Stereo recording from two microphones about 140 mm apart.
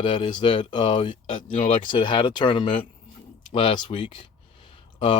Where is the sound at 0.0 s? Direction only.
35° left (ahead or behind).